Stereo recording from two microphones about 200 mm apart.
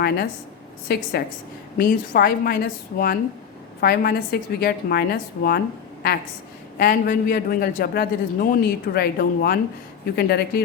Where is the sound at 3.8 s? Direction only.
50° left (ahead or behind).